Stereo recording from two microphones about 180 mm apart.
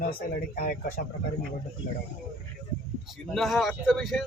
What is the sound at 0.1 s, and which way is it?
Speech, 55° left (ahead or behind).